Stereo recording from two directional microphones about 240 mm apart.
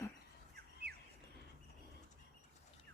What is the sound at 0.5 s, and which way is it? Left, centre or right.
Bird, right.